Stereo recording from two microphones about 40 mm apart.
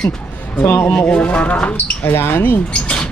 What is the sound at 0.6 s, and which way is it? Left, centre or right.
Speech, left.